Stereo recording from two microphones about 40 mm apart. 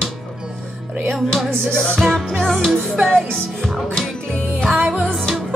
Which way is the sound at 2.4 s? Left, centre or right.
Centre.